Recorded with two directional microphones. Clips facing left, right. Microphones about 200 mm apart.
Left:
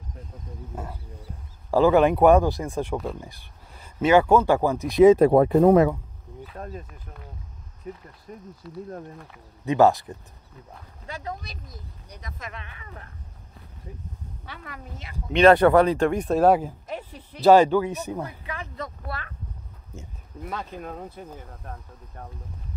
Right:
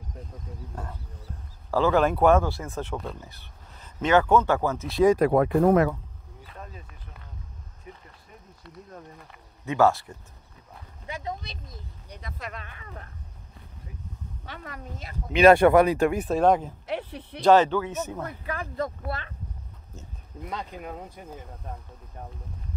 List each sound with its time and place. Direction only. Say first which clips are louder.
0.7 s speech: left 5 dB; 5° left (ahead or behind); by 5.9 s 25° left (ahead or behind)
7.8 s speech: left 9 dB; 40° left (ahead or behind)
8.6 s speech: left 8 dB; centre (ahead or behind)
9.7 s speech: left 3 dB; 15° left (ahead or behind)
11.1 s speech: even; 20° right (ahead or behind)
12.1 s speech: right 1 dB; 30° right (ahead or behind)
14.4 s speech: right 2 dB; 45° right (ahead or behind)
15.3 s speech: even; 10° right (ahead or behind); by 16.7 s 5° left (ahead or behind)
16.8 s speech: right 3 dB; 70° right (ahead or behind)
17.4 s speech: left 3 dB; 10° left (ahead or behind)
19.0 s speech: right 2 dB; 25° right (ahead or behind)
20.4 s speech: left 2 dB; 15° right (ahead or behind)